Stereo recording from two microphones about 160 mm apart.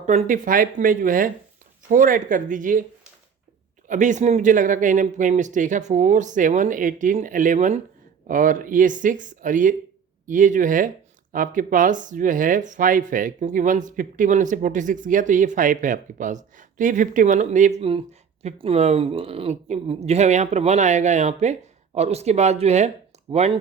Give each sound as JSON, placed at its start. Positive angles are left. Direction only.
{"t": 0.0, "sound": "speech", "side_deg": -45}
{"t": 3.8, "sound": "speech", "side_deg": -50}